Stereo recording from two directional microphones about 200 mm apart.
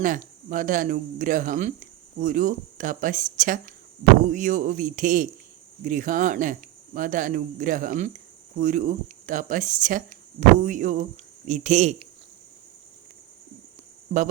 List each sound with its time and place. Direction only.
0.0 s speech: 40° right (ahead or behind)